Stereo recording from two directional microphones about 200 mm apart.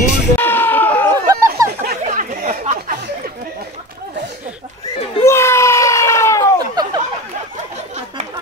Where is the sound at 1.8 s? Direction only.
45° right (ahead or behind).